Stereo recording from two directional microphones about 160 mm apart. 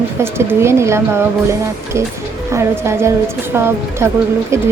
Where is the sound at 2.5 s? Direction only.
15° right (ahead or behind).